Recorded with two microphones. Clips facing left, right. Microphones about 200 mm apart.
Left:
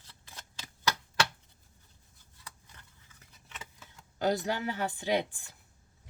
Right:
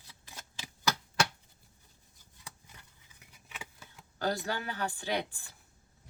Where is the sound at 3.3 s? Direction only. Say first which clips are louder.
Right 1 dB; 10° right (ahead or behind).